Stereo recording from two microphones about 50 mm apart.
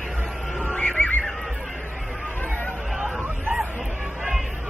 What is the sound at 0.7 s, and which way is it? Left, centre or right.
Neigh, left.